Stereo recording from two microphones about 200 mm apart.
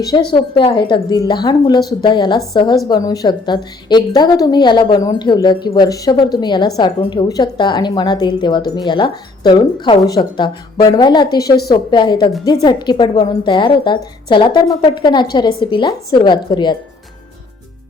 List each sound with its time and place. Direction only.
0.0 s a woman's voice: 20° left (ahead or behind)
11.4 s a woman's voice: 50° left (ahead or behind)
11.7 s a woman's voice: 25° left (ahead or behind)